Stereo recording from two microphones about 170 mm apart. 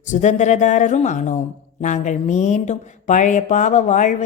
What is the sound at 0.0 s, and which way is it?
Speech, 45° left (ahead or behind).